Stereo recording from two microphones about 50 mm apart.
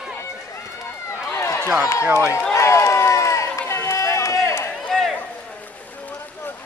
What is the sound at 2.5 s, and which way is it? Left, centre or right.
Run, left.